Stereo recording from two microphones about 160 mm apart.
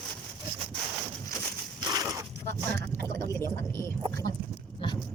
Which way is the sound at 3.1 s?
15° left (ahead or behind).